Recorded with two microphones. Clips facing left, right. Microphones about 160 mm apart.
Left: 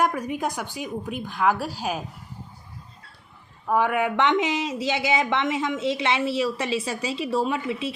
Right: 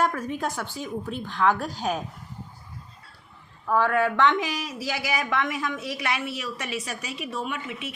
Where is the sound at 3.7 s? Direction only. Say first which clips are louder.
Even; 15° left (ahead or behind).